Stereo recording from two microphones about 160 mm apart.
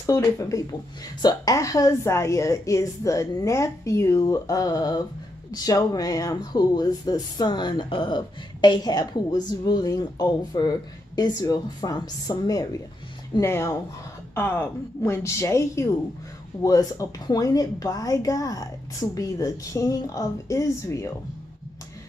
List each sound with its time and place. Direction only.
0.0 s a woman's voice: 20° left (ahead or behind)